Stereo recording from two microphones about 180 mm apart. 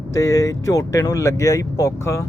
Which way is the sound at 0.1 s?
15° left (ahead or behind).